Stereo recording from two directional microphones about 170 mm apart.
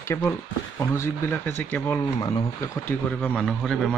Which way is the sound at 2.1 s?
20° left (ahead or behind).